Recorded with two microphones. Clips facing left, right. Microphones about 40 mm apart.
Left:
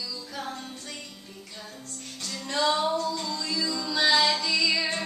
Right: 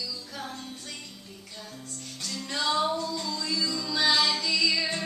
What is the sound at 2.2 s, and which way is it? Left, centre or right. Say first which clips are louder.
Music: left 4 dB; centre.